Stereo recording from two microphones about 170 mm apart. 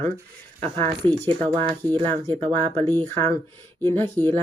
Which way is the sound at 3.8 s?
15° left (ahead or behind).